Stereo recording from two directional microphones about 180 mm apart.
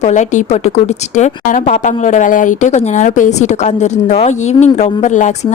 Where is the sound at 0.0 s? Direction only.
40° left (ahead or behind).